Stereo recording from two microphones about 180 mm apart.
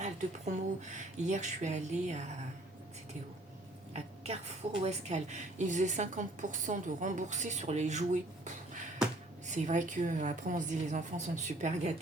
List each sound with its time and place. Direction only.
0.0 s a woman's voice: 40° right (ahead or behind)
3.9 s a woman's voice: 35° right (ahead or behind)